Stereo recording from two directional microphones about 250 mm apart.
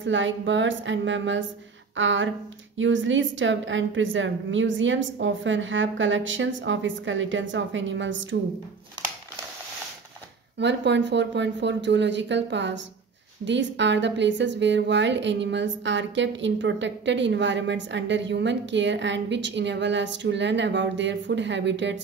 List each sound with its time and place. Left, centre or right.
0.0 s a woman's voice: right
10.6 s a woman's voice: right